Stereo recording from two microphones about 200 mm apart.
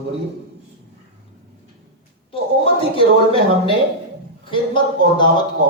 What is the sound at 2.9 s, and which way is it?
A man's voice, 25° left (ahead or behind).